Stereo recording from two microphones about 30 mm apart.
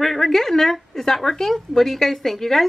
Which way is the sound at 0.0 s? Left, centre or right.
Centre.